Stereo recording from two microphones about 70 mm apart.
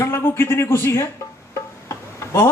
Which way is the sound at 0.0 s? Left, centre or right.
Left.